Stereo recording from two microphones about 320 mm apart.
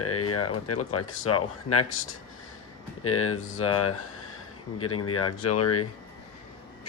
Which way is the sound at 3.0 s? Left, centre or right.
Left.